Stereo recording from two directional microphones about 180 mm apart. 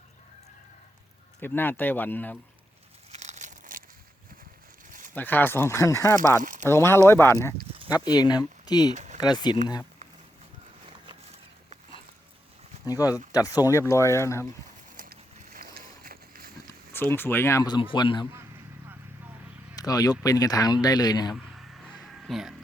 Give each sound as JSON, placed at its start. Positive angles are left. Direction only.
{"t": 1.4, "sound": "speech", "side_deg": 10}
{"t": 3.1, "sound": "crumpling", "side_deg": -40}
{"t": 4.9, "sound": "a sound", "side_deg": -45}
{"t": 5.1, "sound": "speech", "side_deg": 10}
{"t": 12.8, "sound": "speech", "side_deg": 20}
{"t": 14.9, "sound": "a sound", "side_deg": -55}
{"t": 16.9, "sound": "speech", "side_deg": 10}
{"t": 19.7, "sound": "speech", "side_deg": 20}
{"t": 21.3, "sound": "a sound", "side_deg": 0}